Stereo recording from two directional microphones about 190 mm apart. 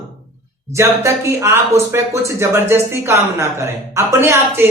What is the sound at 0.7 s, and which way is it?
Speech, 15° right (ahead or behind).